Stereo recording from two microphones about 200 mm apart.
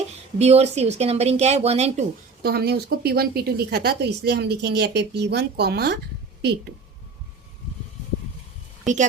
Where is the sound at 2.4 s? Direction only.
50° right (ahead or behind).